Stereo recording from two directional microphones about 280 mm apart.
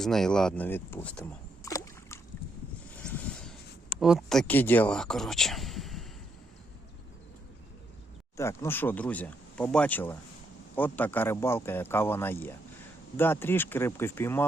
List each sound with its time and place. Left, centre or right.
0.0 s speech: centre
4.0 s speech: centre
8.4 s speech: centre